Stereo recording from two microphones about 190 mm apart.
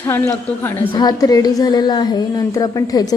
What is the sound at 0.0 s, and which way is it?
A woman's voice, 15° left (ahead or behind).